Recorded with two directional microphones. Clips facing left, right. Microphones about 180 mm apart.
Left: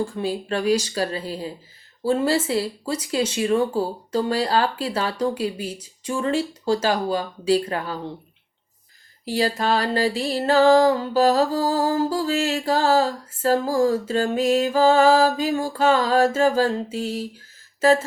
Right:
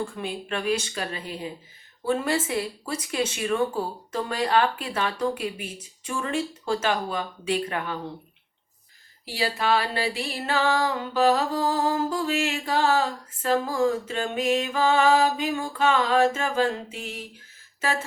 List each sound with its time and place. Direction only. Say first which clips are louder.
0.0 s music: left 6 dB; 35° left (ahead or behind)
9.3 s music: left 3 dB; 40° left (ahead or behind)